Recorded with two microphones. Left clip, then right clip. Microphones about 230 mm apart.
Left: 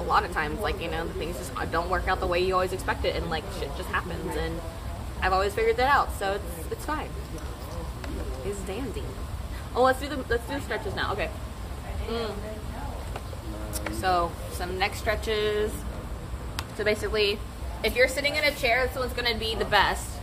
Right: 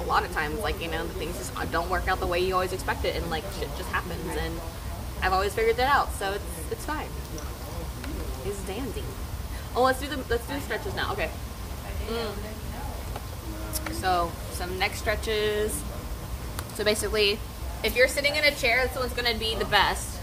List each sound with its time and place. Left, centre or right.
0.1 s speech: centre
5.2 s speech: centre
9.8 s speech: centre
13.7 s speech: centre
16.7 s speech: centre